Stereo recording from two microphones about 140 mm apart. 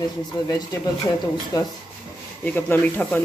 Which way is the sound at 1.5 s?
25° left (ahead or behind).